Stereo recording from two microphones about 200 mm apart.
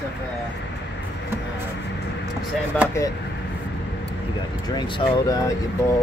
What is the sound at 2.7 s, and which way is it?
Speech, 5° left (ahead or behind).